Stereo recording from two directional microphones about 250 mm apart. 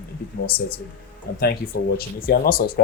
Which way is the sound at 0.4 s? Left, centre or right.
Left.